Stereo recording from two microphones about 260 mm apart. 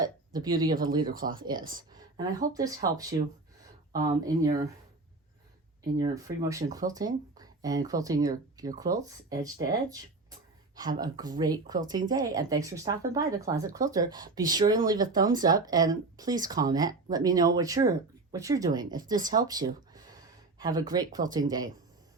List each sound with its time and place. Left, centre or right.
0.3 s speech: centre
1.0 s speech: right
1.7 s speech: centre
6.0 s speech: centre
10.9 s speech: centre